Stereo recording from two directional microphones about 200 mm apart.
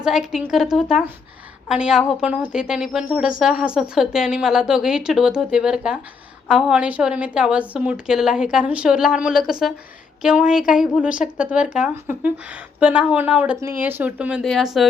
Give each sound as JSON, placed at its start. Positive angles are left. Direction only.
{"t": 0.0, "sound": "a woman's voice", "side_deg": -5}